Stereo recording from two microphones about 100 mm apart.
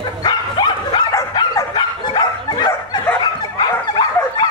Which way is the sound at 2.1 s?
45° left (ahead or behind).